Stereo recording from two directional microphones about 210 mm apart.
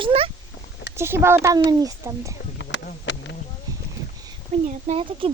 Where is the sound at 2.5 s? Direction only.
55° left (ahead or behind).